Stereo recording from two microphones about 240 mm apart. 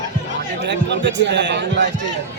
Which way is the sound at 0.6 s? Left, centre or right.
Right.